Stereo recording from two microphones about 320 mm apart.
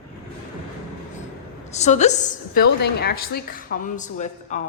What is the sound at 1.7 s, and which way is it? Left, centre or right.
Speech, left.